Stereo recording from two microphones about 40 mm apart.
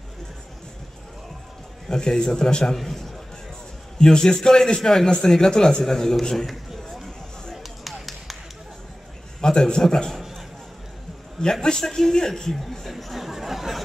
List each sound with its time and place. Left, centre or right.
1.9 s a man's voice: centre
4.0 s a man's voice: centre
6.3 s a sound: centre
9.4 s a man's voice: centre
10.1 s a sound: centre
11.6 s a man's voice: centre